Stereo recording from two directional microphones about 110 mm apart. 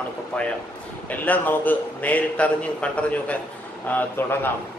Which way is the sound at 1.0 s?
15° left (ahead or behind).